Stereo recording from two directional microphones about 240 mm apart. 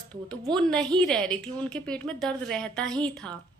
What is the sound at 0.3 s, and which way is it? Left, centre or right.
A woman's voice, centre.